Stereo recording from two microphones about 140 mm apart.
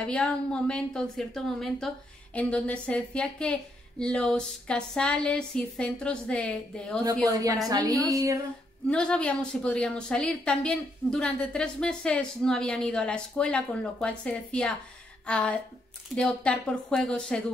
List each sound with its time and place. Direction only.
0.0 s a woman's voice: 5° left (ahead or behind)
7.2 s a woman's voice: 25° right (ahead or behind)
8.8 s a woman's voice: 5° left (ahead or behind)